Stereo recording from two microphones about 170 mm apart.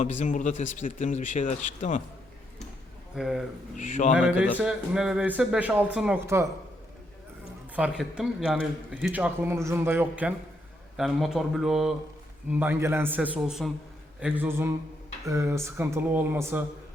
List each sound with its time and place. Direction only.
0.0 s speech: 45° left (ahead or behind)
3.2 s speech: centre (ahead or behind)
3.8 s speech: 45° left (ahead or behind)
4.5 s speech: 5° right (ahead or behind)
7.8 s speech: 5° right (ahead or behind)